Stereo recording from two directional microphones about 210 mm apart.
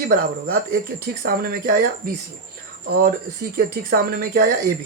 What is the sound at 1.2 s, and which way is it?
Speech, 45° right (ahead or behind).